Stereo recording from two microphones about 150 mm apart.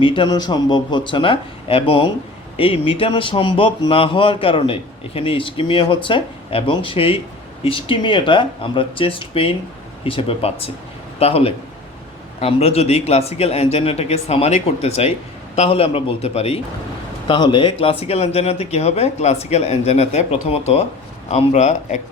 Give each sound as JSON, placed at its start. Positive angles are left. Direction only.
{"t": 0.0, "sound": "a man's voice", "side_deg": 35}
{"t": 17.2, "sound": "speech", "side_deg": 30}